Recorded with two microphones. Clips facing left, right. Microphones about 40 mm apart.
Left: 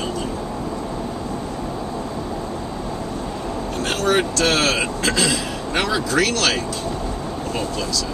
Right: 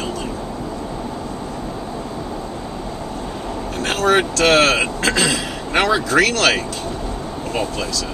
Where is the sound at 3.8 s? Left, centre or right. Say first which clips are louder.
Right 3 dB; right.